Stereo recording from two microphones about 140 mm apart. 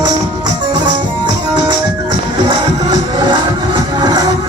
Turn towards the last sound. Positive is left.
turn(degrees=-30)  # may be behind; listen again after turning